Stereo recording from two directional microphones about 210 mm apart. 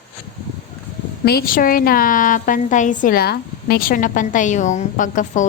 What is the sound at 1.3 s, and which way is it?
A woman's voice, 45° left (ahead or behind).